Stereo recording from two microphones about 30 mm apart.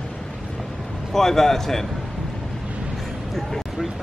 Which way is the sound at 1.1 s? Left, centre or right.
Centre.